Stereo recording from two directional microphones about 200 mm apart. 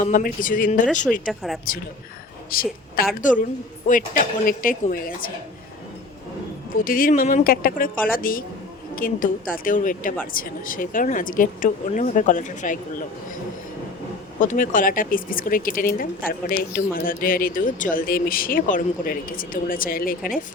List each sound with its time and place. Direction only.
0.0 s speech: 40° left (ahead or behind)
1.3 s speech: centre (ahead or behind)
2.5 s a woman's voice: 45° left (ahead or behind)
6.7 s speech: 45° left (ahead or behind)
14.3 s speech: 40° left (ahead or behind)